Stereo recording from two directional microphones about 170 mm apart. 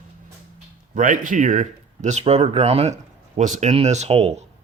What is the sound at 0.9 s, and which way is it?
Speech, 50° right (ahead or behind).